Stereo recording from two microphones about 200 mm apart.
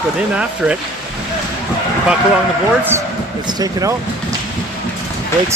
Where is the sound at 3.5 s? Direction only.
20° right (ahead or behind).